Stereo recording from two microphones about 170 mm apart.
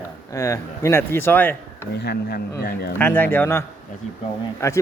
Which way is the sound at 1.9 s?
75° left (ahead or behind).